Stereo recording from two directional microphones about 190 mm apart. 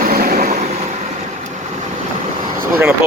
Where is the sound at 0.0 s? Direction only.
50° right (ahead or behind).